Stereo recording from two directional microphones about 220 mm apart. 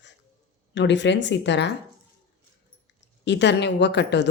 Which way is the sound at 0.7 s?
55° left (ahead or behind).